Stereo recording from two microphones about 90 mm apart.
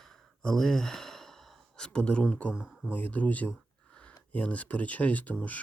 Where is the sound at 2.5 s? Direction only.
10° right (ahead or behind).